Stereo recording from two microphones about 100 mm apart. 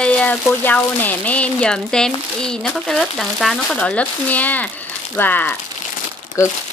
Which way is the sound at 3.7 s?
15° left (ahead or behind).